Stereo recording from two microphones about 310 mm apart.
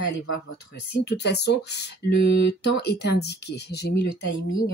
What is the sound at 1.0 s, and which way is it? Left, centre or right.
Speech, left.